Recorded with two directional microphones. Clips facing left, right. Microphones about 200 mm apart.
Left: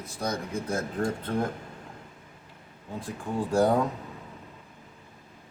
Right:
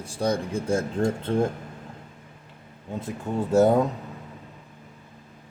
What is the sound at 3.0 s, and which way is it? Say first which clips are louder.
Speech: right 3 dB; 25° right (ahead or behind).